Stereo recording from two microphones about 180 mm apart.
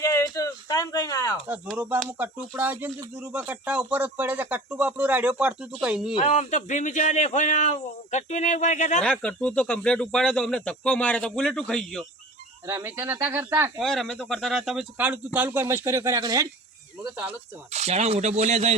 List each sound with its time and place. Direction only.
0.0 s a sound: 20° left (ahead or behind)
1.7 s speech: 10° right (ahead or behind)
6.1 s speech: 40° left (ahead or behind)
9.0 s speech: 5° left (ahead or behind)
12.6 s speech: 15° right (ahead or behind)
13.7 s speech: centre (ahead or behind); by 16.5 s 20° right (ahead or behind)
17.2 s speech: 35° right (ahead or behind)